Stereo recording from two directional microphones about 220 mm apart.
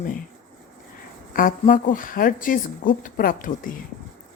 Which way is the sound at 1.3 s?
40° left (ahead or behind).